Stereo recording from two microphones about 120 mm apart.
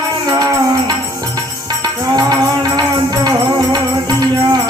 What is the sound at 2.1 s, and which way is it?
Music, 35° right (ahead or behind).